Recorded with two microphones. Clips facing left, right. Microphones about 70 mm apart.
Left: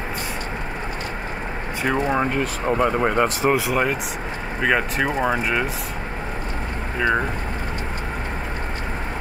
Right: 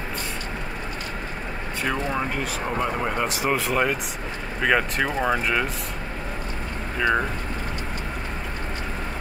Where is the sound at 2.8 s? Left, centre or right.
Left.